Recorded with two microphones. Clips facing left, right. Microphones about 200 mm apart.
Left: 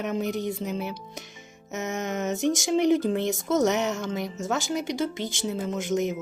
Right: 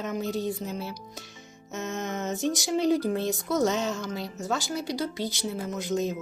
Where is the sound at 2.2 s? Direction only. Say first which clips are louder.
Left 4 dB; 20° left (ahead or behind).